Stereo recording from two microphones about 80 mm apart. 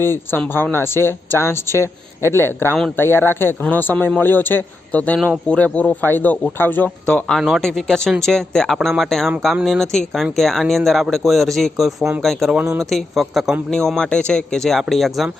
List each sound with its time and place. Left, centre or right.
0.0 s speech: left
7.0 s a man's voice: centre
12.5 s a man's voice: centre